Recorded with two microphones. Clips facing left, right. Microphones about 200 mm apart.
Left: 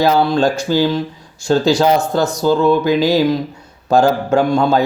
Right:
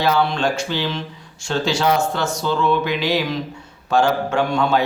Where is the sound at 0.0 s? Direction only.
35° left (ahead or behind).